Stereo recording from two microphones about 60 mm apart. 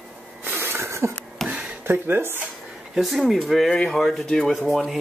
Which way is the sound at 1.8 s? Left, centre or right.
Right.